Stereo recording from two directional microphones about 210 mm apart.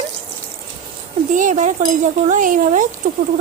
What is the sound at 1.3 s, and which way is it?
Speech, 35° right (ahead or behind).